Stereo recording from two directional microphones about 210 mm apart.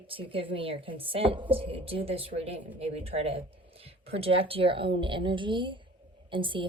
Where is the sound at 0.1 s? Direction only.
25° right (ahead or behind).